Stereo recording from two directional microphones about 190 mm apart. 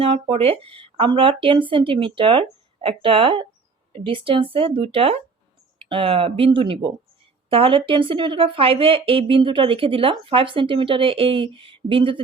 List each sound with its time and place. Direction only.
0.0 s speech: 30° right (ahead or behind)